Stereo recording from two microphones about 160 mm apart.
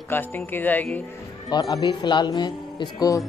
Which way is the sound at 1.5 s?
25° left (ahead or behind).